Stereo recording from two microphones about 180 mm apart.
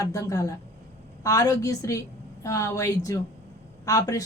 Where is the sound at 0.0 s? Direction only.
20° left (ahead or behind).